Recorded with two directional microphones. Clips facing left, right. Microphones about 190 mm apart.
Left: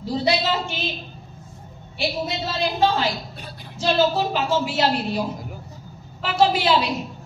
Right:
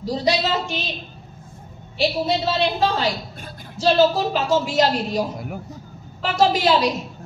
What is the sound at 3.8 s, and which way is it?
A woman's voice, 40° right (ahead or behind).